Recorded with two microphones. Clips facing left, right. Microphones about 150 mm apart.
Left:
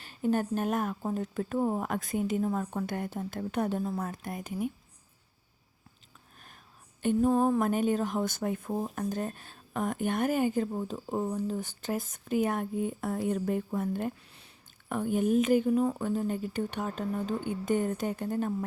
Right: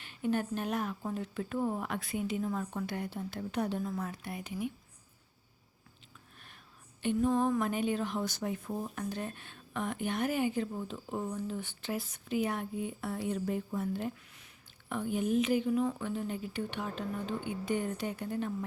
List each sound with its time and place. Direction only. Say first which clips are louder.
0.0 s a woman's voice: left 4 dB; 40° left (ahead or behind)
3.8 s a woman's voice: left 3 dB; 40° left (ahead or behind)
7.0 s a woman's voice: left 4 dB; 45° left (ahead or behind)